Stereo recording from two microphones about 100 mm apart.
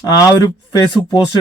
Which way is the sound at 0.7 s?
45° left (ahead or behind).